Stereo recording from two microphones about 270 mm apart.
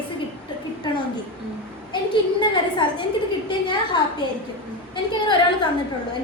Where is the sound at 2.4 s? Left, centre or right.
Centre.